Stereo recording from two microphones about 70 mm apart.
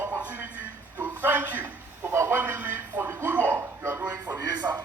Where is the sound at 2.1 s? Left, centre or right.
Right.